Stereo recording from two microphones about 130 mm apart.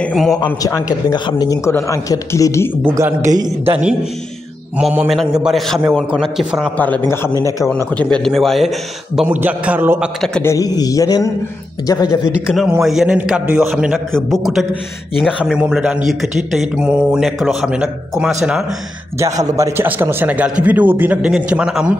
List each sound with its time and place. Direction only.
0.1 s a man's voice: centre (ahead or behind)
0.6 s speech: 25° left (ahead or behind)
3.0 s a man's voice: 20° right (ahead or behind)
4.7 s a man's voice: 5° right (ahead or behind)
6.8 s a man's voice: 15° left (ahead or behind); by 10.0 s 15° right (ahead or behind)
10.4 s speech: 25° left (ahead or behind)
12.3 s a man's voice: 5° right (ahead or behind)
19.5 s speech: 20° right (ahead or behind)